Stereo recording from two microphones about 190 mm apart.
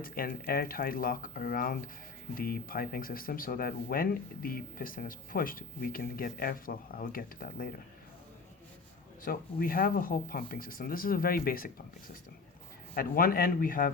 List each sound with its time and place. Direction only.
0.0 s speech: 50° left (ahead or behind)
9.2 s speech: 50° left (ahead or behind)
12.9 s speech: 50° left (ahead or behind)